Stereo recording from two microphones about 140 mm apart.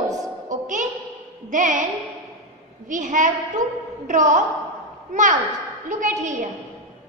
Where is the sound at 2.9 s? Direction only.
65° right (ahead or behind).